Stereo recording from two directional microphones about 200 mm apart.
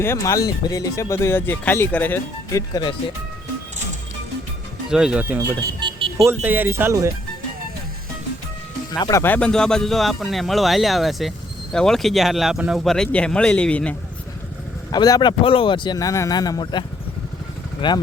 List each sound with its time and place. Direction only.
0.0 s speech: 15° left (ahead or behind)
4.9 s speech: 5° right (ahead or behind)
5.5 s a sound: 25° right (ahead or behind)
6.2 s speech: 10° right (ahead or behind)
8.9 s speech: 20° left (ahead or behind)
14.9 s speech: 20° left (ahead or behind)